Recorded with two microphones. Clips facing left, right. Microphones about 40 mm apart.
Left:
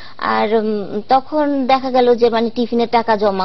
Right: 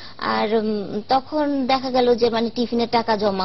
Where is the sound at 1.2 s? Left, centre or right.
Centre.